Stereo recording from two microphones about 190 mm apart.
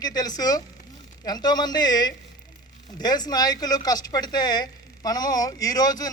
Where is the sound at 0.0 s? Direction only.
20° left (ahead or behind).